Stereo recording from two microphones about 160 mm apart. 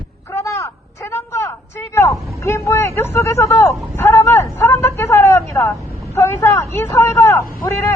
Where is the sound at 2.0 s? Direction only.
15° left (ahead or behind).